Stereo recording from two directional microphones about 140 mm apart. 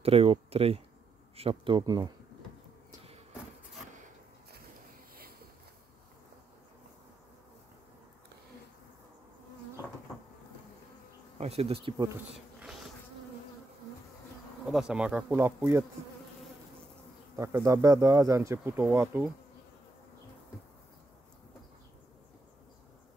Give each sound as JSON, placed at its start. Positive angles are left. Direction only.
{"t": 0.0, "sound": "speech", "side_deg": -45}
{"t": 11.3, "sound": "speech", "side_deg": -45}
{"t": 12.5, "sound": "bee", "side_deg": -5}
{"t": 14.7, "sound": "speech", "side_deg": -5}
{"t": 17.4, "sound": "speech", "side_deg": -20}